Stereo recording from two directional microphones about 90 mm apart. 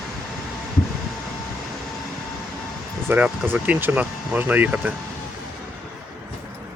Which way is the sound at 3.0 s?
20° right (ahead or behind).